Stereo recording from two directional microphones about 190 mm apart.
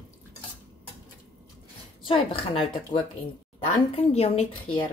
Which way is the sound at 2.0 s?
30° left (ahead or behind).